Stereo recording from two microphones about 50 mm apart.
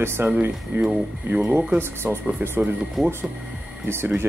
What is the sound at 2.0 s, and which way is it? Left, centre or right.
Speech, right.